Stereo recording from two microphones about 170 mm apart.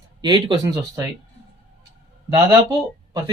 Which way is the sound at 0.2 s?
25° right (ahead or behind).